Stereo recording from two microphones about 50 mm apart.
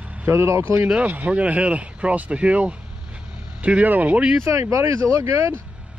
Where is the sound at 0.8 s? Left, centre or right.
Right.